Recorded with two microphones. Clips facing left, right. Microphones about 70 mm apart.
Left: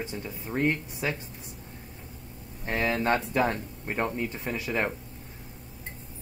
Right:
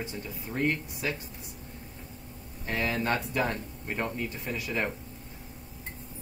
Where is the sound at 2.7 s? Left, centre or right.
Left.